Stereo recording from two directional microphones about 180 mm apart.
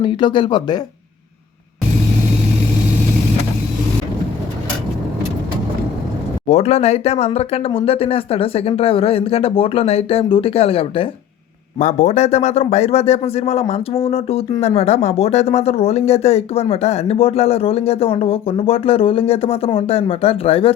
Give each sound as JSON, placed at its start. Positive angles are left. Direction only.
{"t": 0.0, "sound": "speech", "side_deg": 25}
{"t": 6.5, "sound": "speech", "side_deg": 35}